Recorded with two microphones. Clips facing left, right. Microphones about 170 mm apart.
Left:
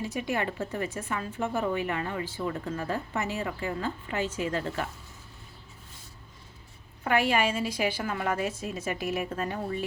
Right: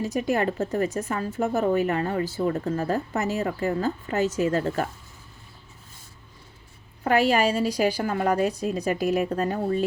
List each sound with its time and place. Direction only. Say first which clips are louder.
0.0 s speech: right 6 dB; 40° right (ahead or behind)
7.0 s speech: right 5 dB; 40° right (ahead or behind)